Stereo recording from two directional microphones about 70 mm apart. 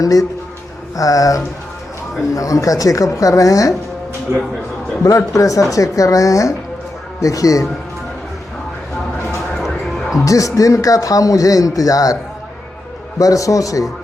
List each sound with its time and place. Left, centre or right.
0.0 s speech: left
4.3 s speech: right
5.0 s speech: left
9.6 s music: centre
10.2 s speech: left
13.1 s speech: left